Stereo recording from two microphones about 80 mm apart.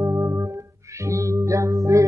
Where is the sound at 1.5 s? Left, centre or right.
Right.